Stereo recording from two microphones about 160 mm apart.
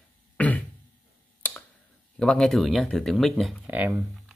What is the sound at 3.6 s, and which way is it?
Speech, 10° right (ahead or behind).